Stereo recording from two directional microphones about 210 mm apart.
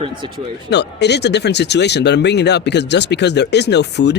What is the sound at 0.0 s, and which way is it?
Speech, 25° right (ahead or behind).